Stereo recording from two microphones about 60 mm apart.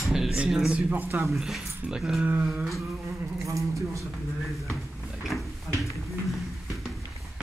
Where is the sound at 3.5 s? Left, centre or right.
Right.